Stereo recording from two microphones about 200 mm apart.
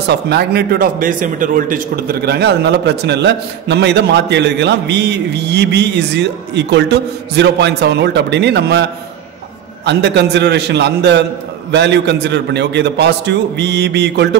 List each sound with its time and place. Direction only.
0.1 s a man's voice: 55° right (ahead or behind)
9.8 s a man's voice: 60° right (ahead or behind)